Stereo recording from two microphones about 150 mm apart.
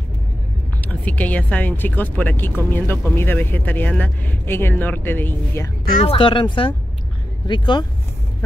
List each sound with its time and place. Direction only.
0.7 s speech: 10° left (ahead or behind)
6.0 s speech: 35° left (ahead or behind)